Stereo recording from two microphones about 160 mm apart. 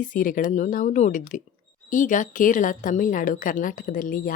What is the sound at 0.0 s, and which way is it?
A woman's voice, 55° left (ahead or behind).